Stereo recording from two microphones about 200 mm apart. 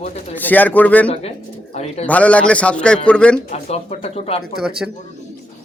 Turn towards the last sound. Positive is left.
turn(degrees=-5)  # may be behind; listen again after turning